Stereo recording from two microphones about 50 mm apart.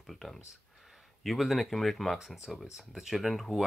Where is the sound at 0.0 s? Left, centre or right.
Centre.